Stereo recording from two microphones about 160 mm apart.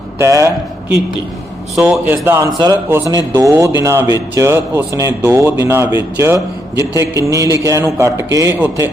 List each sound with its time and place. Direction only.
0.2 s a man's voice: 15° right (ahead or behind)
1.7 s a man's voice: 5° right (ahead or behind)